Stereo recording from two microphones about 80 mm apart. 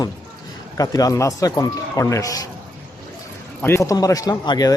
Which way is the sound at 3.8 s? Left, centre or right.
Left.